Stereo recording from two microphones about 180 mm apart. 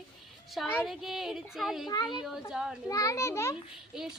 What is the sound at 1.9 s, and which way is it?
Speech, 25° left (ahead or behind).